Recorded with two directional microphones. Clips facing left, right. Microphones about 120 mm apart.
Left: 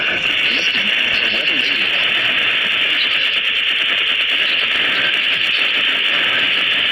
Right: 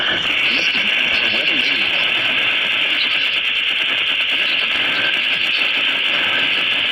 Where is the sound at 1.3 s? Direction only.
40° left (ahead or behind).